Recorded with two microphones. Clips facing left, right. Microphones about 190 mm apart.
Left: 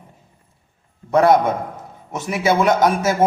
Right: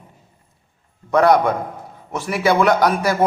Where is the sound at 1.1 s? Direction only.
25° left (ahead or behind).